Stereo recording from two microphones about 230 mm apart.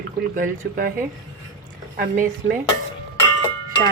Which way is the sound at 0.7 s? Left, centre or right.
Right.